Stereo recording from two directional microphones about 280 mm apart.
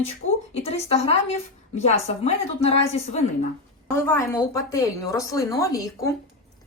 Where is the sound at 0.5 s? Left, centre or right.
Left.